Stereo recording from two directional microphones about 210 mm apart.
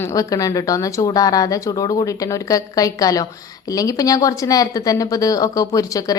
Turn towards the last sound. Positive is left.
turn(degrees=15)  # may be behind; listen again after turning